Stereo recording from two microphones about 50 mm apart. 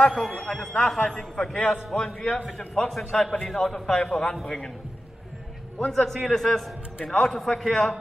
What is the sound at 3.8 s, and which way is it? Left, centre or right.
Speech, centre.